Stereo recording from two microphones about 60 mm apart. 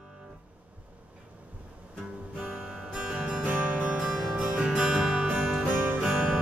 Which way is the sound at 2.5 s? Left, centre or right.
Centre.